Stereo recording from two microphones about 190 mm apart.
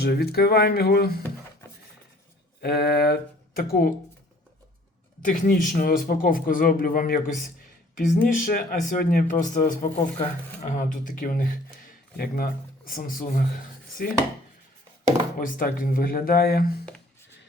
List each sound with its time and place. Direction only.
0.0 s speech: 55° left (ahead or behind)
2.6 s speech: 55° left (ahead or behind)
5.2 s speech: 45° left (ahead or behind)
15.4 s speech: 50° left (ahead or behind)